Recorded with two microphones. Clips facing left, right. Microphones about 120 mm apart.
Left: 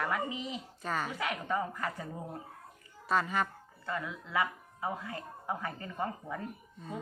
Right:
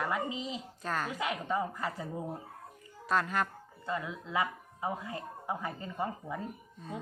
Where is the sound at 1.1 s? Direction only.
15° right (ahead or behind).